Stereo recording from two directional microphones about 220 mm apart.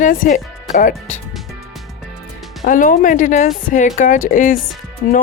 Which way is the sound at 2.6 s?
35° left (ahead or behind).